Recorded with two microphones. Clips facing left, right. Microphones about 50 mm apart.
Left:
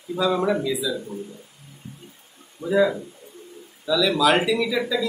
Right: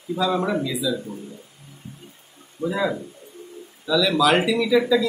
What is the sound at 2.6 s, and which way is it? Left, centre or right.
Speech, right.